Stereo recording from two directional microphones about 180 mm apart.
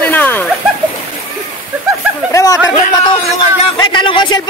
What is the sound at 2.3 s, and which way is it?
Speech, 15° left (ahead or behind).